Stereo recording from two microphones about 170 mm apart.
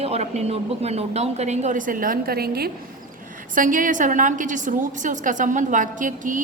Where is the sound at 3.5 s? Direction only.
50° right (ahead or behind).